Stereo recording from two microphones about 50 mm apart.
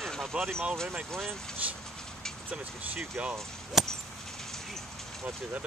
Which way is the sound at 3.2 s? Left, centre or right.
Right.